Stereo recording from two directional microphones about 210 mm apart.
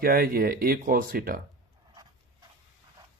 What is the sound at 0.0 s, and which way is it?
Speech, 45° right (ahead or behind).